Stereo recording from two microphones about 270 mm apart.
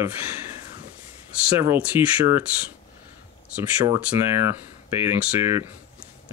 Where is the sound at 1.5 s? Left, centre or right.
Centre.